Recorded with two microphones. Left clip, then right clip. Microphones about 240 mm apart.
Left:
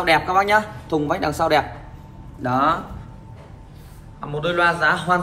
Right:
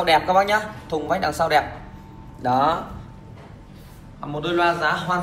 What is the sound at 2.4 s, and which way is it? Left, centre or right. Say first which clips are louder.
Speech: even; centre.